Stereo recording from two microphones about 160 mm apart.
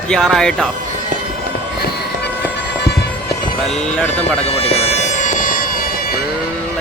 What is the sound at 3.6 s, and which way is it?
Speech, 5° left (ahead or behind).